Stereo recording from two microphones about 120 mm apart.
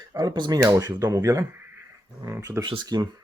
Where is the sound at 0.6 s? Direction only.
25° right (ahead or behind).